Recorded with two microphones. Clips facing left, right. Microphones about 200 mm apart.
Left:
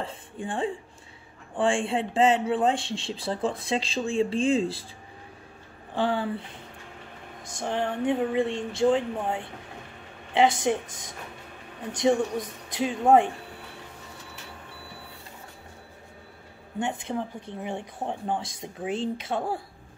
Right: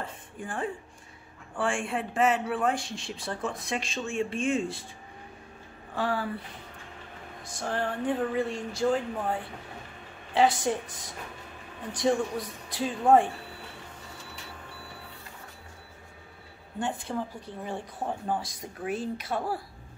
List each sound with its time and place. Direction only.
0.0 s speech: 30° left (ahead or behind)
5.9 s speech: 25° left (ahead or behind)
7.6 s speech: 15° left (ahead or behind)
12.0 s speech: 20° left (ahead or behind)
16.8 s speech: 20° left (ahead or behind)